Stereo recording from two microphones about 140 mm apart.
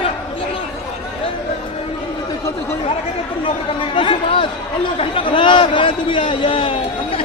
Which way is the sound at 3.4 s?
35° left (ahead or behind).